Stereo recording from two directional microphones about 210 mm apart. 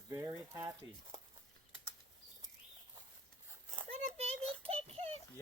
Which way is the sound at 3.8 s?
30° right (ahead or behind).